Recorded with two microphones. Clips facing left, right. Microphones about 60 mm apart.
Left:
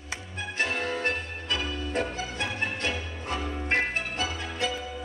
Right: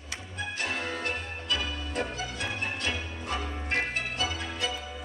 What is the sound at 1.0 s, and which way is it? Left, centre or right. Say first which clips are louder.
Music: left 3 dB; left.